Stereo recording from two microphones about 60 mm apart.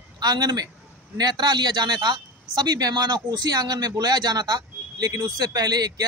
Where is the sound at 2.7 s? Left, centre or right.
Right.